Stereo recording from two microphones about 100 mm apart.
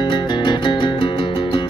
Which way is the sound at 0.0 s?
50° left (ahead or behind).